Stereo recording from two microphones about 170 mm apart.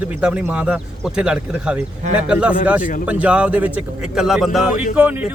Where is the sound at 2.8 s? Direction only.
50° left (ahead or behind).